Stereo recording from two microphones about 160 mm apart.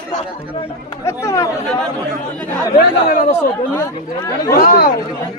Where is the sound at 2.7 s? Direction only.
60° left (ahead or behind).